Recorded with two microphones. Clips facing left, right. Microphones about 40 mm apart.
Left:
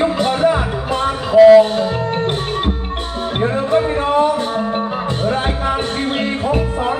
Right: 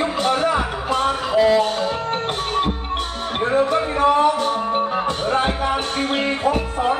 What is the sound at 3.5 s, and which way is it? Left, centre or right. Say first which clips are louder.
Music: left 1 dB; left.